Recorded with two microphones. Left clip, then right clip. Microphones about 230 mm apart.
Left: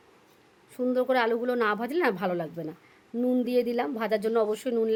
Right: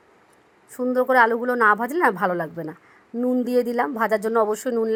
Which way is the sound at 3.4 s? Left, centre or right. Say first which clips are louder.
Right 6 dB; right.